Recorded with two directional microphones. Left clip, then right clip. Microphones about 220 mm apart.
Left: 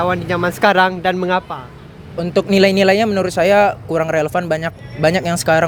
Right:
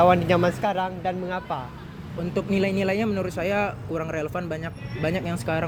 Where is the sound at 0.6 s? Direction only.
45° left (ahead or behind).